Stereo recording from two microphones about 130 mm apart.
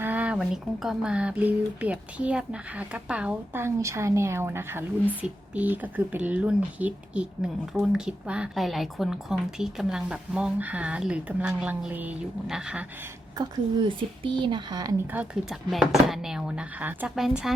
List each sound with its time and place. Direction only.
0.0 s speech: 10° right (ahead or behind)
3.6 s a woman's voice: 20° right (ahead or behind); by 12.8 s 5° right (ahead or behind)
13.3 s speech: 35° right (ahead or behind)
15.1 s speech: 10° right (ahead or behind)